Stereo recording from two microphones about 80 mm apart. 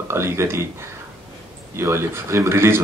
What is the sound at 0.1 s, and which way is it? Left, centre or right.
Speech, right.